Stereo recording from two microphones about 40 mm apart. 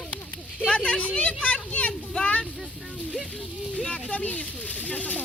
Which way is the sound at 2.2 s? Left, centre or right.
Left.